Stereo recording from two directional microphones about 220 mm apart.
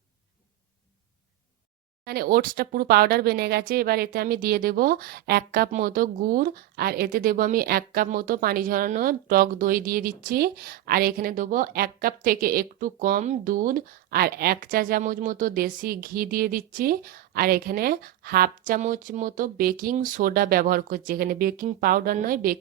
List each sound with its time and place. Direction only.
2.0 s speech: 45° right (ahead or behind)